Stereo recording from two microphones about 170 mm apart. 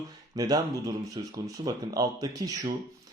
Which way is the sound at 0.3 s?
20° right (ahead or behind).